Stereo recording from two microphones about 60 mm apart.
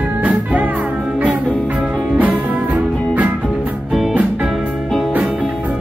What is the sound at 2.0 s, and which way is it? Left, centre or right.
Music, right.